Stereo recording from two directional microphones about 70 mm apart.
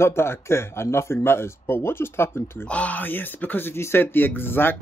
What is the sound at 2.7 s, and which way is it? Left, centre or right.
Speech, left.